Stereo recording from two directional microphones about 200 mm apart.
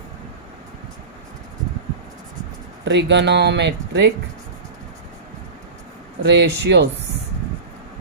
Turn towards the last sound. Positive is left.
turn(degrees=-55)  # may be behind; listen again after turning